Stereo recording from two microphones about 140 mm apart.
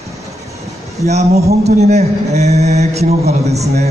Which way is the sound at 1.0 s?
50° right (ahead or behind).